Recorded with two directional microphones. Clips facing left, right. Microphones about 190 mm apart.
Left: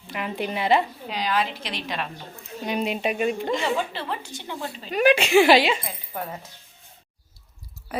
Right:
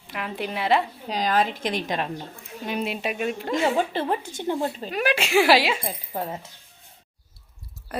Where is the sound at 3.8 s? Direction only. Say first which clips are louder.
Right 5 dB; 45° right (ahead or behind).